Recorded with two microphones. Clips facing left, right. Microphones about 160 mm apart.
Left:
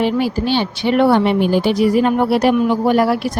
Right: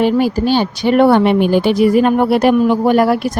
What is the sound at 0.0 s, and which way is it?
A woman's voice, 45° right (ahead or behind).